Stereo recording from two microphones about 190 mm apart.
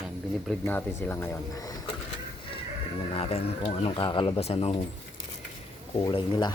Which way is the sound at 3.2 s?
30° left (ahead or behind).